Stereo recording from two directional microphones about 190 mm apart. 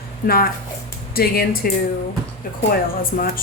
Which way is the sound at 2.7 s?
50° left (ahead or behind).